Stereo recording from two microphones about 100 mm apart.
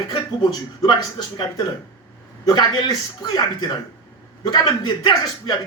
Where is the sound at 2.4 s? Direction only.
45° left (ahead or behind).